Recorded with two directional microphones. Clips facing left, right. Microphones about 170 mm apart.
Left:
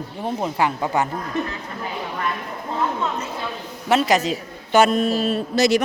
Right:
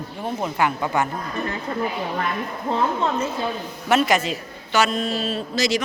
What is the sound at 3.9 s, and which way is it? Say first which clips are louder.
A man's voice: left 1 dB; 35° left (ahead or behind).